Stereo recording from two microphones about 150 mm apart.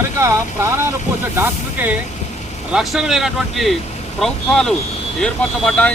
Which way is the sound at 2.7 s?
Centre (ahead or behind).